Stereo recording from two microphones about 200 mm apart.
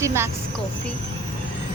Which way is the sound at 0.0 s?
15° right (ahead or behind).